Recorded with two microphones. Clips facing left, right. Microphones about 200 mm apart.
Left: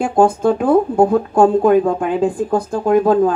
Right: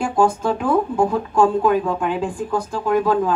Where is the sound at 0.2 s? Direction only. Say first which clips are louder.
Left 5 dB; 45° left (ahead or behind).